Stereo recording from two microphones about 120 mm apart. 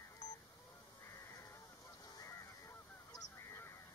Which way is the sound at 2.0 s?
25° left (ahead or behind).